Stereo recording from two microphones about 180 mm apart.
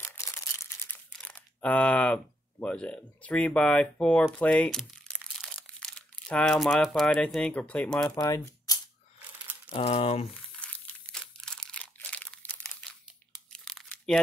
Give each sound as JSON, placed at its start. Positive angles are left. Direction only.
{"t": 0.0, "sound": "a sound", "side_deg": 15}
{"t": 1.1, "sound": "speech", "side_deg": 5}
{"t": 8.2, "sound": "speech", "side_deg": 20}
{"t": 9.7, "sound": "speech", "side_deg": 30}
{"t": 10.6, "sound": "crumpling", "side_deg": 5}
{"t": 13.3, "sound": "crunch", "side_deg": 0}